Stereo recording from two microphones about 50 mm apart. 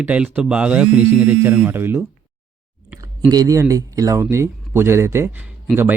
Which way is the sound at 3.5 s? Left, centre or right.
Right.